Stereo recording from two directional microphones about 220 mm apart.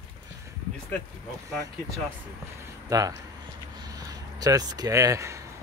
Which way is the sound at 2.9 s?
15° right (ahead or behind).